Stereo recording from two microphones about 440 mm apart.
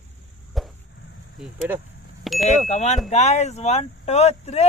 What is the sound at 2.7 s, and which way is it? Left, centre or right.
Speech, centre.